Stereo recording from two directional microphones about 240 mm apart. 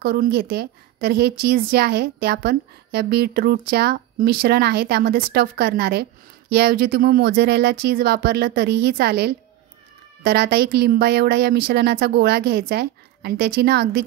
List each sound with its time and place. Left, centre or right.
0.0 s a woman's voice: right